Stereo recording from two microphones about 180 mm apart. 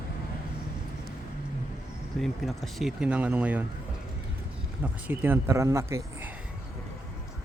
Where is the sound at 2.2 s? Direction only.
Centre (ahead or behind).